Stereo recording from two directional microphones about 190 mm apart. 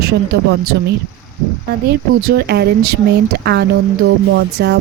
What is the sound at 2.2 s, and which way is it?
A woman's voice, 55° right (ahead or behind).